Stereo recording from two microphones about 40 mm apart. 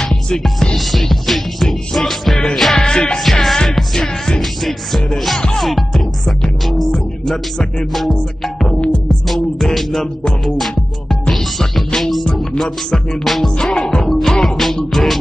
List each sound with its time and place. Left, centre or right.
0.0 s music: centre
0.7 s music: centre
2.8 s music: centre
3.3 s music: centre
10.4 s music: centre
12.6 s music: centre
13.2 s music: centre
13.6 s music: centre